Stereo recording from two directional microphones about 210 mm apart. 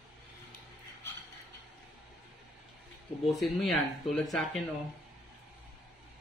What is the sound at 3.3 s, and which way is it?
Speech, centre (ahead or behind).